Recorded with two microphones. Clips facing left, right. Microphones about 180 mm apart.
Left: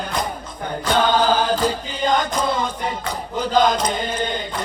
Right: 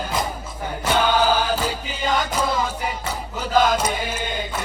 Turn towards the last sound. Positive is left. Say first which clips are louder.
# left 3 dB
turn(degrees=-5)  # may be behind; listen again after turning